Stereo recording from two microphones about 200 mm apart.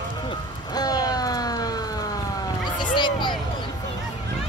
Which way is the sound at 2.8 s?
25° left (ahead or behind).